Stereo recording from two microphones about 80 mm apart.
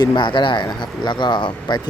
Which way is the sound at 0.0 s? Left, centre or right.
Left.